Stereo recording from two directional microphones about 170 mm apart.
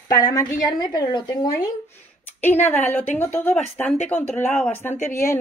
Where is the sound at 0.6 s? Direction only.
25° left (ahead or behind).